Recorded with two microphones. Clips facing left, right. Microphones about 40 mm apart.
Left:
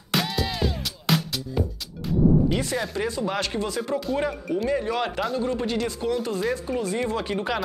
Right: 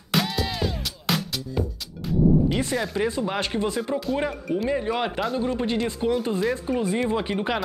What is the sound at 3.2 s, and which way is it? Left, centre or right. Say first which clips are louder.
Speech: right 1 dB; right.